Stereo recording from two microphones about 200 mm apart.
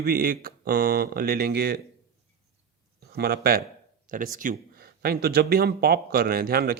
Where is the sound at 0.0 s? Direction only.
50° right (ahead or behind).